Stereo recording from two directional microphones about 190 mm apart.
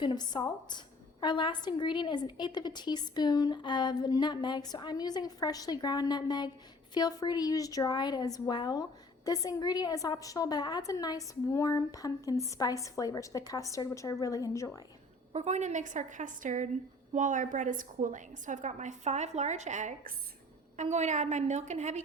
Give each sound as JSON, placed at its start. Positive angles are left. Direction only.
{"t": 0.0, "sound": "a woman's voice", "side_deg": 25}
{"t": 15.3, "sound": "a woman's voice", "side_deg": -35}